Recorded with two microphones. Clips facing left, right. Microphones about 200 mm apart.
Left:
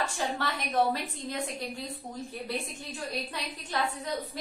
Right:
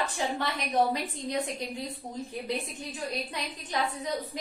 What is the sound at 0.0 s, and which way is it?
Speech, 20° right (ahead or behind).